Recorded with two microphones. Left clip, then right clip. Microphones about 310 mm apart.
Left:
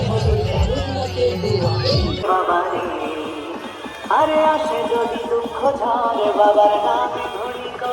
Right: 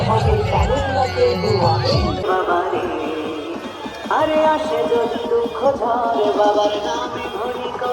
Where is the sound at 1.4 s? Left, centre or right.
Centre.